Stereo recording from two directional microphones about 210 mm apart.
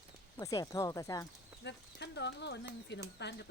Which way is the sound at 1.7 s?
55° left (ahead or behind).